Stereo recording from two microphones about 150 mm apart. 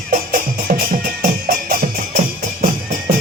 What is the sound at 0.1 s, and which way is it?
Music, 65° right (ahead or behind).